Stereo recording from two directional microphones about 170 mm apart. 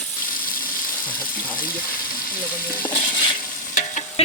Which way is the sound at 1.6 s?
55° left (ahead or behind).